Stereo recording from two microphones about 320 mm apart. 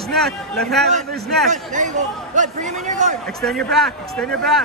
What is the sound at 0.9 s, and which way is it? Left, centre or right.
A man's voice, right.